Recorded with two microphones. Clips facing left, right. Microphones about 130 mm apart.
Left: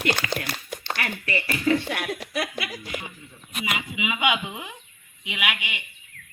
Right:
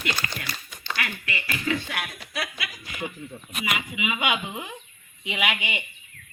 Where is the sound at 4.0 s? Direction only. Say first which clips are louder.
Left 3 dB; 15° left (ahead or behind).